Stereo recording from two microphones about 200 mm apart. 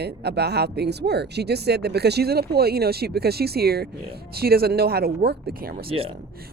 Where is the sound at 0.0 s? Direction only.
55° right (ahead or behind).